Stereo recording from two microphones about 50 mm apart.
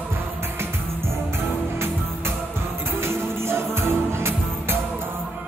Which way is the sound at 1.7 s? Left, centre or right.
Right.